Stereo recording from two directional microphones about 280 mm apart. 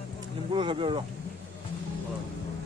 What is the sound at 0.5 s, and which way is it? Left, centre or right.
Speech, centre.